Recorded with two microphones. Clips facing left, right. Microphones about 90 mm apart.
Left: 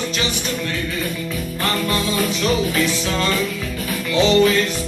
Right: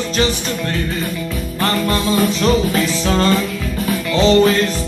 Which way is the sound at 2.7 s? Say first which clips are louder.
Right 3 dB; 40° right (ahead or behind).